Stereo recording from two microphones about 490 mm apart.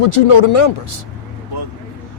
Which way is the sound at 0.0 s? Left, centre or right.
Left.